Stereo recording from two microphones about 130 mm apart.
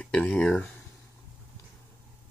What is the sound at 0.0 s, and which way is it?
Speech, 10° left (ahead or behind).